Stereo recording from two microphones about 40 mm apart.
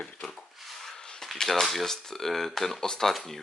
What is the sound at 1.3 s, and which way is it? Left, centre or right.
Speech, centre.